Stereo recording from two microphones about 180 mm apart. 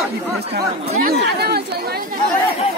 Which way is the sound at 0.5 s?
60° right (ahead or behind).